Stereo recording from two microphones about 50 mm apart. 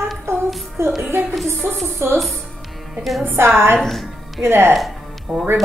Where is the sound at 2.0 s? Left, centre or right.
Right.